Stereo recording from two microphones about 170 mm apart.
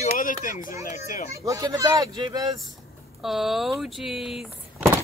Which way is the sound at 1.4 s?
20° right (ahead or behind).